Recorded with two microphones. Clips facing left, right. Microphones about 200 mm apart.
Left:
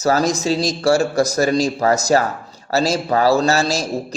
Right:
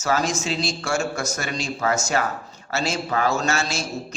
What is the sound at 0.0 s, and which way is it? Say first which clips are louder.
A man's voice: left 6 dB; 35° left (ahead or behind).